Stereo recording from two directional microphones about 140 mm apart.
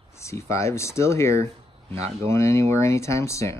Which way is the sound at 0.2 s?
20° left (ahead or behind).